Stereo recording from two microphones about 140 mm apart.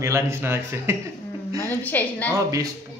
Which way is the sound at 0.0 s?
20° right (ahead or behind).